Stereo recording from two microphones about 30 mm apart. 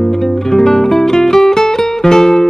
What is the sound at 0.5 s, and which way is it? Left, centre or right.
Music, centre.